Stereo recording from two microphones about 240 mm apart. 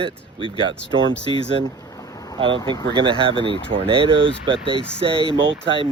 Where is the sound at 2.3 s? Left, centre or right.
Right.